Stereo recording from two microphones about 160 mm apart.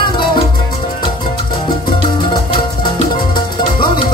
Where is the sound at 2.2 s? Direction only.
30° left (ahead or behind).